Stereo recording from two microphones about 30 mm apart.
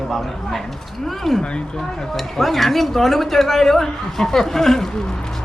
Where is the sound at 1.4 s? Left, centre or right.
Left.